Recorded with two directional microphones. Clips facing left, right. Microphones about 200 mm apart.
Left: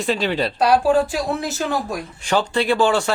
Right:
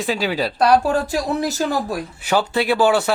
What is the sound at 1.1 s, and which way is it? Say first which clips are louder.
Speech: right 2 dB; 40° right (ahead or behind).